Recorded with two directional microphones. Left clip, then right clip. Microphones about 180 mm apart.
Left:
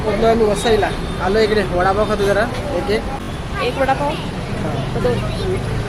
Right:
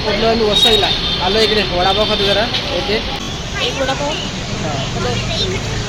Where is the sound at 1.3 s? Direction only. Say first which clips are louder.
Left 1 dB; 5° left (ahead or behind).